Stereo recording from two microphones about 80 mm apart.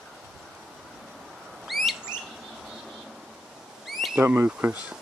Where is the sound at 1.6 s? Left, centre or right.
Centre.